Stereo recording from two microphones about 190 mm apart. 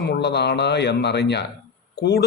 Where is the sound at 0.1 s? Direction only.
60° left (ahead or behind).